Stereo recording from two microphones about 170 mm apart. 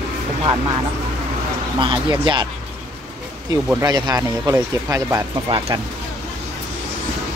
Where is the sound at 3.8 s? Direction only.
25° right (ahead or behind).